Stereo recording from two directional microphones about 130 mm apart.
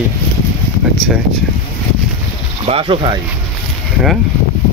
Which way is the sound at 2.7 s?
45° right (ahead or behind).